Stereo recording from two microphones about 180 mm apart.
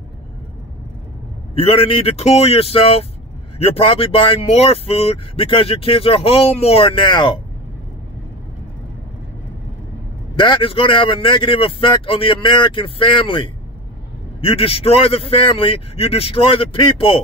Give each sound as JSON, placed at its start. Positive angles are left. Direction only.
{"t": 1.5, "sound": "speech", "side_deg": 35}
{"t": 10.3, "sound": "a man's voice", "side_deg": 25}